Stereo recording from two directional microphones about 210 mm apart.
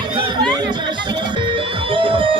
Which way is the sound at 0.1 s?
20° right (ahead or behind).